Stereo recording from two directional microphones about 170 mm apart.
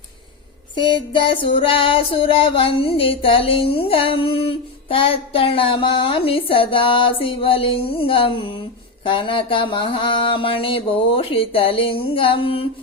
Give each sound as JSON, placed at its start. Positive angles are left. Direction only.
{"t": 0.8, "sound": "music", "side_deg": 30}